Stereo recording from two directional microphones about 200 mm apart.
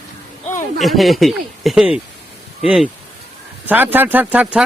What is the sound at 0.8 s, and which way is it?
Speech, centre (ahead or behind).